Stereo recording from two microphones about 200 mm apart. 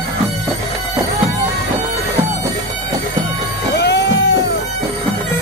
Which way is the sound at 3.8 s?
60° left (ahead or behind).